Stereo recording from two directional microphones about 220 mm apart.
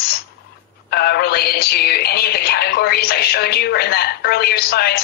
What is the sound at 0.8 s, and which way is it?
Synthetic singing, 45° left (ahead or behind).